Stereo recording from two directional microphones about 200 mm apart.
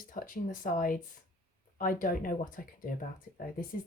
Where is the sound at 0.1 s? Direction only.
40° left (ahead or behind).